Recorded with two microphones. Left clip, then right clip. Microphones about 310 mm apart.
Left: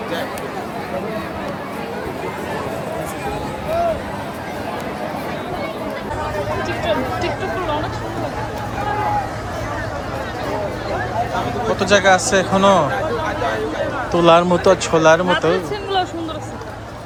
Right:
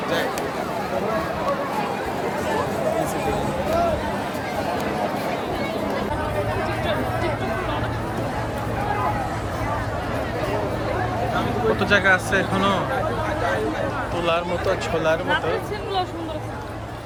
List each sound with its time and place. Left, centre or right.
11.8 s speech: centre
14.3 s speech: left